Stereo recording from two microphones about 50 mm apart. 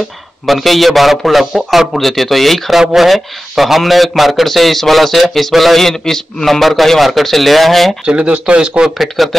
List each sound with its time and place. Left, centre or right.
0.5 s speech: centre
8.1 s speech: right
8.9 s speech: centre